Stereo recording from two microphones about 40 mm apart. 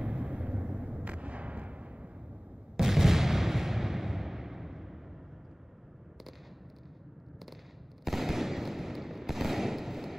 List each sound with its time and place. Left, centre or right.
0.0 s artillery fire: right
2.8 s artillery fire: centre
8.0 s fireworks: centre